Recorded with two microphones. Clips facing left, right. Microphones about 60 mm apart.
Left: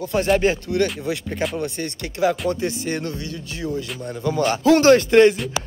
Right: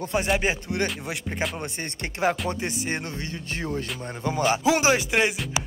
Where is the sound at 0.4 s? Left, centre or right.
Centre.